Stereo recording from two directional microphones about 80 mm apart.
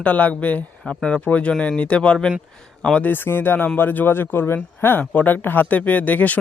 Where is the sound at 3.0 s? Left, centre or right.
Left.